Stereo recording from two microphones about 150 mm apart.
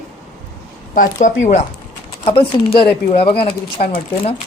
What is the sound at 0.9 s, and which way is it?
Speech, 55° left (ahead or behind).